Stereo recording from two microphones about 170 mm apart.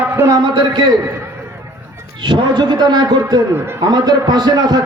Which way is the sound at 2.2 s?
25° right (ahead or behind).